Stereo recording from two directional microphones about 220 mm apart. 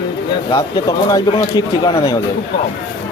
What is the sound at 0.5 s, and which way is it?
Speech, 15° left (ahead or behind).